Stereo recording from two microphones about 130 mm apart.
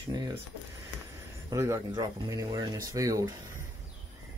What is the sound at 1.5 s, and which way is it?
Speech, 25° right (ahead or behind).